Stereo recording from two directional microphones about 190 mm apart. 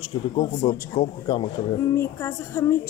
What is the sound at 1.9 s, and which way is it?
Speech, 15° left (ahead or behind).